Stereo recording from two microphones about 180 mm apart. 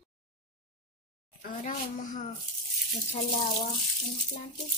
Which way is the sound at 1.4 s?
45° left (ahead or behind).